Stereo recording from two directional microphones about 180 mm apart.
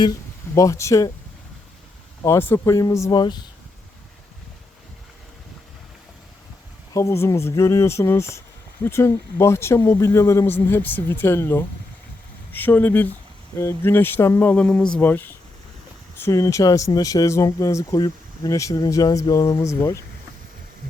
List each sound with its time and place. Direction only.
0.5 s speech: 15° left (ahead or behind)
2.2 s speech: 15° left (ahead or behind)
6.9 s speech: 15° left (ahead or behind)